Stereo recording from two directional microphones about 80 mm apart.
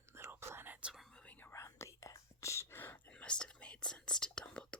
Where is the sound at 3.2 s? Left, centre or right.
Centre.